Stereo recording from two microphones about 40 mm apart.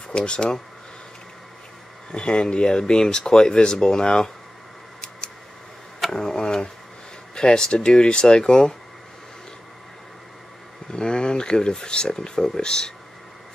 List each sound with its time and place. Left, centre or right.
0.1 s speech: left
2.1 s speech: left
6.1 s tick-tock: centre
7.3 s speech: centre
10.9 s speech: left